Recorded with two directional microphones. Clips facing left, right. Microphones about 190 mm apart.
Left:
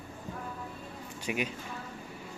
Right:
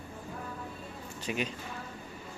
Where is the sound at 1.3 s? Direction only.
10° left (ahead or behind).